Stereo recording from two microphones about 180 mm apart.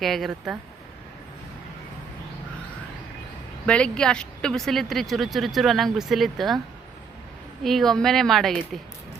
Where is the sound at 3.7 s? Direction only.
5° left (ahead or behind).